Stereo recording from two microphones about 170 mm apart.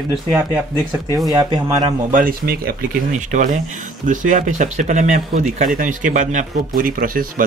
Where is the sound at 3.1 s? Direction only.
45° right (ahead or behind).